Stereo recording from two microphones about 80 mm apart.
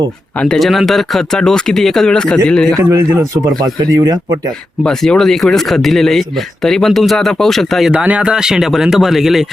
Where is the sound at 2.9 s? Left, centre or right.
Right.